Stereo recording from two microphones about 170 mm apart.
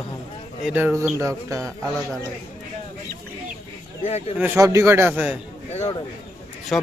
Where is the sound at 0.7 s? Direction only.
10° right (ahead or behind).